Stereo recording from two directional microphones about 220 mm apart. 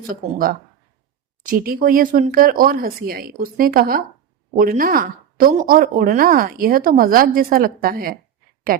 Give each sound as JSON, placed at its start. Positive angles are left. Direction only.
{"t": 1.5, "sound": "speech", "side_deg": -40}